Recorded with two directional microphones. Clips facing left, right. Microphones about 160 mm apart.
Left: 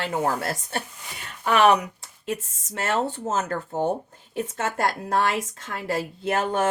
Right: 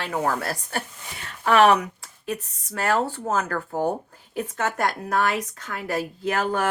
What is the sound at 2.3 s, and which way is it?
A woman's voice, 25° left (ahead or behind).